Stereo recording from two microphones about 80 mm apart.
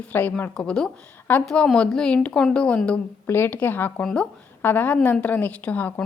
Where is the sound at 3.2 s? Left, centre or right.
Left.